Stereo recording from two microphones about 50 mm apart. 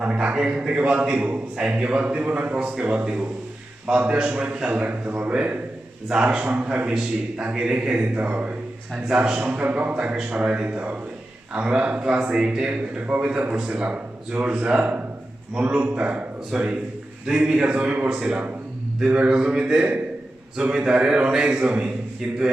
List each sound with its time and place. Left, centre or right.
0.3 s a man's voice: centre
6.4 s a man's voice: right
9.0 s a man's voice: centre
9.5 s a man's voice: right; by 12.8 s centre
13.1 s a man's voice: right
16.5 s a man's voice: centre; by 18.1 s right
18.1 s a man's voice: centre